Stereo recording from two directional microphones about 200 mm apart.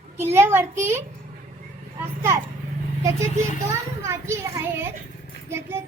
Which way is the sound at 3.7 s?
15° right (ahead or behind).